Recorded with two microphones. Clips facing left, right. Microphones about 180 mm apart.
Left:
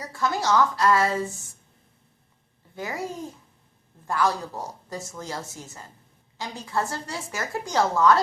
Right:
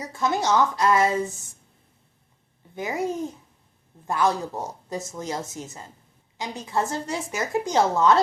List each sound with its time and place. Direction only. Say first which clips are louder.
0.0 s a woman's voice: right 2 dB; 20° right (ahead or behind)
2.7 s a woman's voice: right 5 dB; 20° right (ahead or behind)